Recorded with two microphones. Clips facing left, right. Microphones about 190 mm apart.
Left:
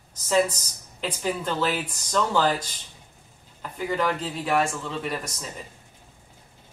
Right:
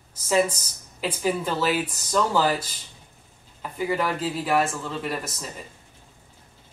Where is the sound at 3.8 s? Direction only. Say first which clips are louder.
Right 1 dB; 5° right (ahead or behind).